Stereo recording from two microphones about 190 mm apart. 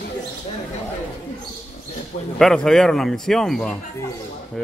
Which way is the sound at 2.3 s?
5° left (ahead or behind).